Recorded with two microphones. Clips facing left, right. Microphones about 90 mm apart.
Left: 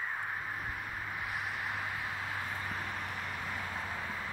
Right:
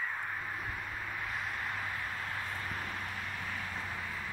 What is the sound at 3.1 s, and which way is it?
Vehicle, 15° left (ahead or behind).